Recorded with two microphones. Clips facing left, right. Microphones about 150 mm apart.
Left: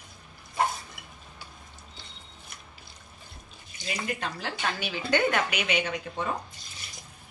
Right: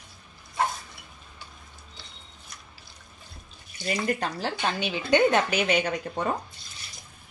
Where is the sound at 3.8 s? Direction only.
40° right (ahead or behind).